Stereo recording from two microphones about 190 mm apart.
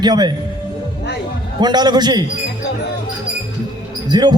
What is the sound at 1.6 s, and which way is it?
Speech, 20° right (ahead or behind).